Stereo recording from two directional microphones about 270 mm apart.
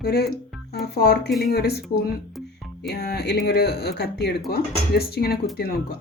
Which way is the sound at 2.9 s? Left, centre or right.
Left.